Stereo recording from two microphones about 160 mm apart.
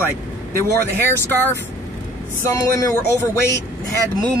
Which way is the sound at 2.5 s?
20° left (ahead or behind).